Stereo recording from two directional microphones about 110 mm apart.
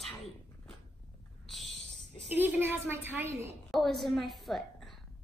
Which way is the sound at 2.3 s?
15° right (ahead or behind).